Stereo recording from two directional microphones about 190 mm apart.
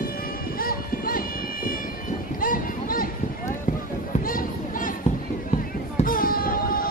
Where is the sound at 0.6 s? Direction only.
50° left (ahead or behind).